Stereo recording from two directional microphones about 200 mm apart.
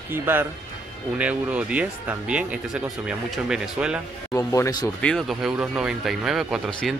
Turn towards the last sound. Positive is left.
turn(degrees=0)  # may be behind; listen again after turning